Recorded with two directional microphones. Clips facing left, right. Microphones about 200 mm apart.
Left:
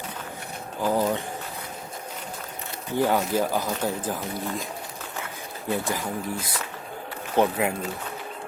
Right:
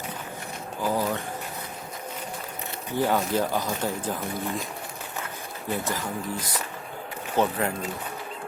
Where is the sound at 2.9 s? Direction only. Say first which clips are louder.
Left 1 dB; 15° left (ahead or behind).